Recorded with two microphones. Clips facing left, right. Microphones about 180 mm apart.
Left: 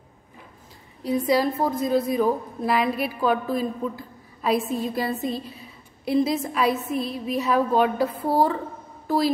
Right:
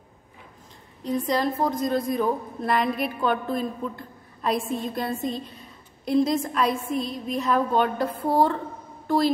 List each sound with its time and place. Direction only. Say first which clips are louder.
1.0 s a woman's voice: left 3 dB; 5° left (ahead or behind)